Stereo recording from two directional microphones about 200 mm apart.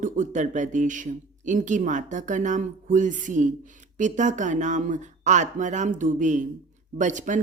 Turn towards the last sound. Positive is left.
turn(degrees=-40)  # may be behind; listen again after turning